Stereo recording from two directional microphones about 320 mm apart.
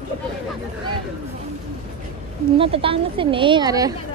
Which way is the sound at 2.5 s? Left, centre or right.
Centre.